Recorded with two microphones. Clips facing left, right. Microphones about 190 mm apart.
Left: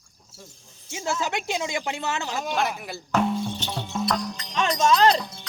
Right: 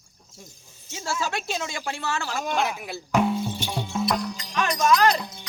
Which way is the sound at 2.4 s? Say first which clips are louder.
Right 1 dB; centre (ahead or behind).